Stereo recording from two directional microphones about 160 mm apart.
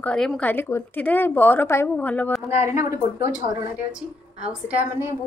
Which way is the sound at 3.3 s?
5° right (ahead or behind).